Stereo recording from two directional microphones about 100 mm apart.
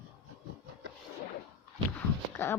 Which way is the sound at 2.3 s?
25° left (ahead or behind).